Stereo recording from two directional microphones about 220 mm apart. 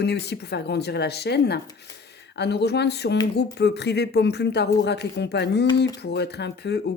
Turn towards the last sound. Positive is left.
turn(degrees=50)  # may be behind; listen again after turning